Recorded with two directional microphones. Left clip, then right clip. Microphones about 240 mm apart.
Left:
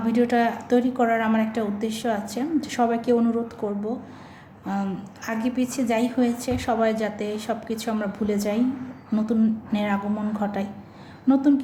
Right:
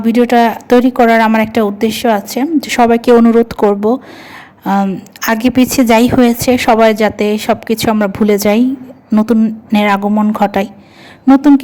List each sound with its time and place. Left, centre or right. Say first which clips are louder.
0.0 s a woman's voice: right 12 dB; right